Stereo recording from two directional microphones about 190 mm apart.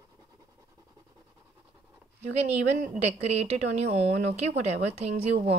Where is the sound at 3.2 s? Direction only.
35° right (ahead or behind).